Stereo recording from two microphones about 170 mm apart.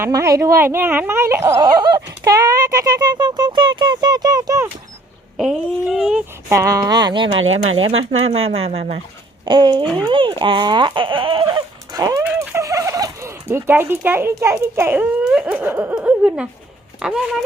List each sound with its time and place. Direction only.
0.0 s speech: 20° right (ahead or behind)
5.4 s speech: centre (ahead or behind)
6.5 s speech: 20° right (ahead or behind); by 9.0 s 40° right (ahead or behind)
9.5 s speech: 25° right (ahead or behind)
12.2 s fowl: 15° right (ahead or behind)
15.2 s speech: 5° right (ahead or behind)